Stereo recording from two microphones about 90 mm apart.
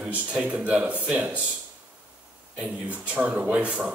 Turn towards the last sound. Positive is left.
turn(degrees=-10)  # may be behind; listen again after turning